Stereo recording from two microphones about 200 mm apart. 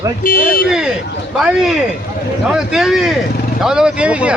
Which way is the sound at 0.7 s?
5° right (ahead or behind).